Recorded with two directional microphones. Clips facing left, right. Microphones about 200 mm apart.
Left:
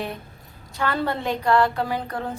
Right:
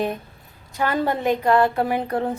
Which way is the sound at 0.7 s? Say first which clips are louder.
Right 3 dB; 15° right (ahead or behind).